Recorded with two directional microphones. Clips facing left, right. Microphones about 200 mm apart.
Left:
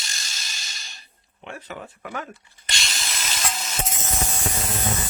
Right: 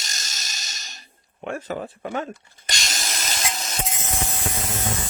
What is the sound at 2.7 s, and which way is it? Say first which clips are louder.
Tools: right 2 dB; 40° right (ahead or behind).